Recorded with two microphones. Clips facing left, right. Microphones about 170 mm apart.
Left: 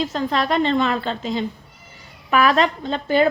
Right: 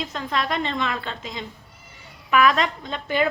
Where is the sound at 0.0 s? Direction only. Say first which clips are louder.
Left 5 dB; 30° left (ahead or behind).